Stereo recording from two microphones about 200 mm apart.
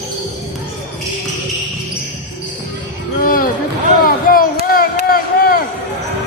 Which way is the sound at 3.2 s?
45° left (ahead or behind).